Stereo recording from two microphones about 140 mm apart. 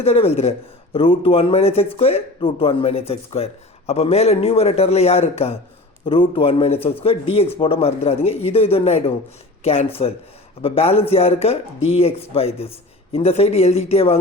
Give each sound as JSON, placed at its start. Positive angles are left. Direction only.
{"t": 0.0, "sound": "a man's voice", "side_deg": 45}